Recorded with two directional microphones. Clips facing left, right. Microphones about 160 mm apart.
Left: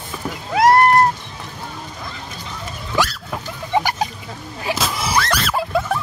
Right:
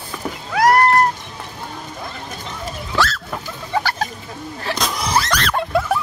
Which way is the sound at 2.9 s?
15° left (ahead or behind).